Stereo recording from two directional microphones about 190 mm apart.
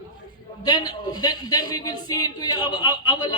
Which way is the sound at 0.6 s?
20° left (ahead or behind).